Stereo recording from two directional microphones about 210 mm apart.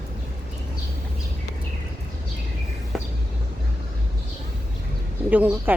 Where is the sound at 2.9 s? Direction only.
Centre (ahead or behind).